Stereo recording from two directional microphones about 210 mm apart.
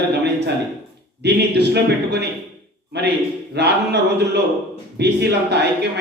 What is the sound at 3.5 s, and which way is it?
A man's voice, 50° right (ahead or behind).